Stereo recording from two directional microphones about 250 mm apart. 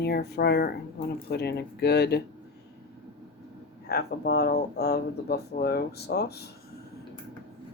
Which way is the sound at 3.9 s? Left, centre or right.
Left.